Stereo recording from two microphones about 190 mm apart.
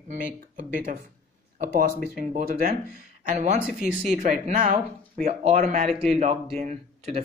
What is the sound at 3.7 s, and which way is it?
Speech, centre (ahead or behind).